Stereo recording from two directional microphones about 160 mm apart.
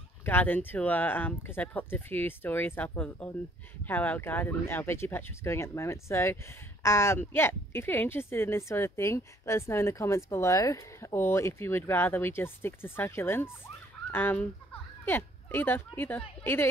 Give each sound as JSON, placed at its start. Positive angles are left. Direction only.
{"t": 0.2, "sound": "speech", "side_deg": 10}